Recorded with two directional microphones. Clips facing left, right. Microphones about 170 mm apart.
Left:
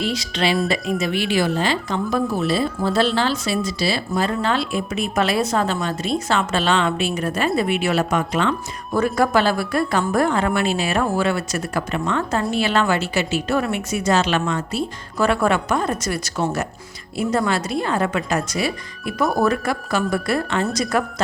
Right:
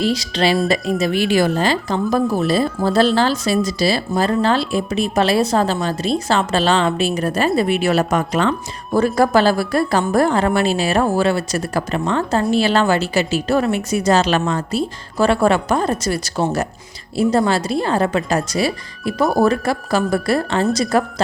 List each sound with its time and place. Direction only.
0.0 s a woman's voice: 35° right (ahead or behind)